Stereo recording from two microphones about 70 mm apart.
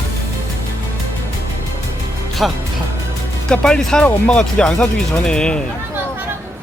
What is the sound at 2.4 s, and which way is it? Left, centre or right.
Speech, centre.